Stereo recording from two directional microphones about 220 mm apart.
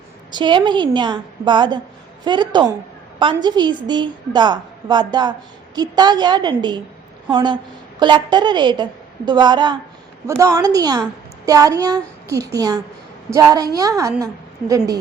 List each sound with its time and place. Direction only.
0.3 s a woman's voice: 20° right (ahead or behind)